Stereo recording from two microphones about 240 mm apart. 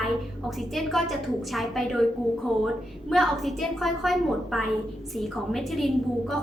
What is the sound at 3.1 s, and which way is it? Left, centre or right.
A woman's voice, centre.